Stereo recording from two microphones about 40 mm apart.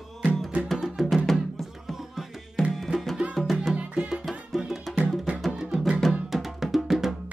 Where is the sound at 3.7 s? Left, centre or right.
Right.